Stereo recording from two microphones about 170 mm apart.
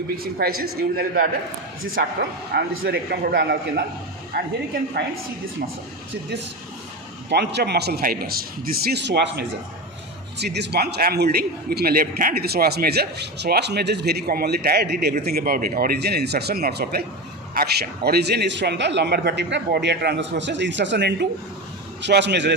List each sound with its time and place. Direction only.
0.4 s a man's voice: 70° right (ahead or behind)
2.5 s a man's voice: 70° right (ahead or behind)
7.3 s a man's voice: 80° right